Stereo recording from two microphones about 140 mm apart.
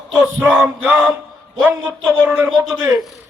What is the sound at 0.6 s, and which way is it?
Music, 5° right (ahead or behind).